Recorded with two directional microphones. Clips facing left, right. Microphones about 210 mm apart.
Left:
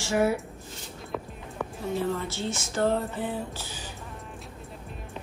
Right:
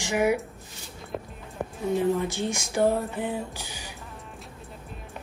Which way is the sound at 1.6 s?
15° right (ahead or behind).